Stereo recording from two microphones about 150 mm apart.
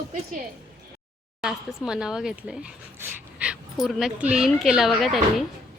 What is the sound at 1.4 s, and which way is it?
Speech, 5° right (ahead or behind).